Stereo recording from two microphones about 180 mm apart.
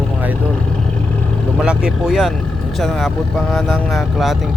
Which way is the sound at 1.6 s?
5° right (ahead or behind).